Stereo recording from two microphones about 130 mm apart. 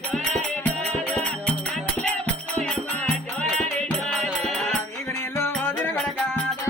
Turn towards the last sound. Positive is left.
turn(degrees=5)  # may be behind; listen again after turning